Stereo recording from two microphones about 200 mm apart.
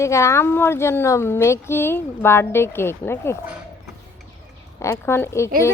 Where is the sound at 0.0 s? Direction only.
15° left (ahead or behind).